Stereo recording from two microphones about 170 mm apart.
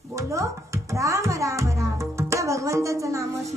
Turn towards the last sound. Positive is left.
turn(degrees=-20)  # may be behind; listen again after turning